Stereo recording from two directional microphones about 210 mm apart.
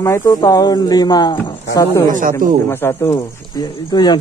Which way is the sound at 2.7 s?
10° left (ahead or behind).